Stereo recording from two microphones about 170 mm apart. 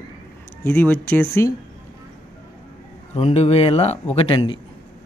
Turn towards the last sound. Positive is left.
turn(degrees=30)  # may be behind; listen again after turning